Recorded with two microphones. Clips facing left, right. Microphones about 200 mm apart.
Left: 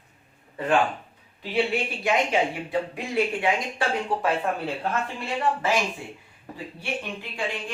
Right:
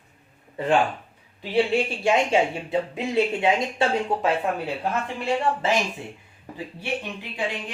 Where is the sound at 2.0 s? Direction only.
25° right (ahead or behind).